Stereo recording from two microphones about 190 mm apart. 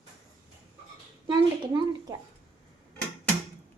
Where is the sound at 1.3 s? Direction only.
25° right (ahead or behind).